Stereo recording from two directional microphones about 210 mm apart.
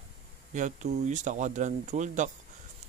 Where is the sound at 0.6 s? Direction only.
35° right (ahead or behind).